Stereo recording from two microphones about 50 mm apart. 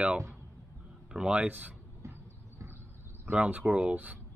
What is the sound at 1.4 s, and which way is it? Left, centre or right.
Speech, right.